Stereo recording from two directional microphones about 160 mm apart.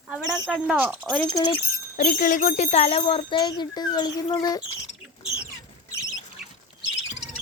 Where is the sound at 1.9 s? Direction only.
55° left (ahead or behind); by 4.6 s 25° left (ahead or behind).